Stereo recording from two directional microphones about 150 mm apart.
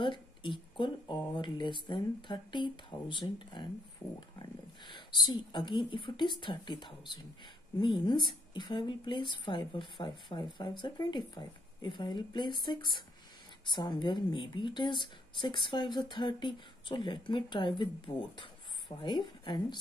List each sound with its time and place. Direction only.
0.0 s speech: 35° left (ahead or behind)
4.0 s a sound: 5° left (ahead or behind)
4.9 s speech: 30° left (ahead or behind)